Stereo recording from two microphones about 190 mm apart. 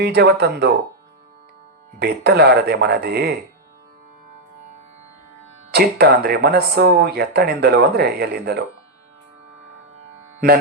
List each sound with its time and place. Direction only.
0.0 s speech: 55° right (ahead or behind)
2.0 s speech: 55° right (ahead or behind)
5.7 s speech: 60° right (ahead or behind)